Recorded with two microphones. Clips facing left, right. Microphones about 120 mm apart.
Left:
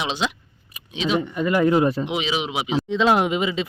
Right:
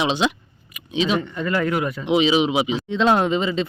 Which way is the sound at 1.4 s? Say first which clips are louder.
Left 4 dB; 15° left (ahead or behind).